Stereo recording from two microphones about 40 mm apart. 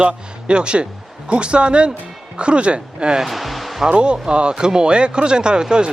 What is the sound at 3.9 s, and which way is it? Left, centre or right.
Speech, right.